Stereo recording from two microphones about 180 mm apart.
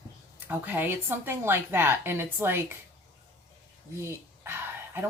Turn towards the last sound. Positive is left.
turn(degrees=-10)  # may be behind; listen again after turning